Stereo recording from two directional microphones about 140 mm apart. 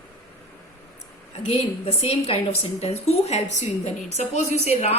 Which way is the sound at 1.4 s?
50° left (ahead or behind).